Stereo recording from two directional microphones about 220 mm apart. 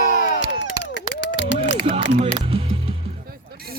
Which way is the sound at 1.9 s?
25° right (ahead or behind).